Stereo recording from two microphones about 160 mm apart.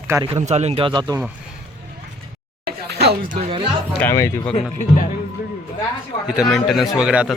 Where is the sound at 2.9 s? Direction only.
85° right.